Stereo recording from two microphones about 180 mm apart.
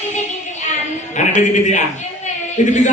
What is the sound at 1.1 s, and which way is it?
Speech, 40° left (ahead or behind).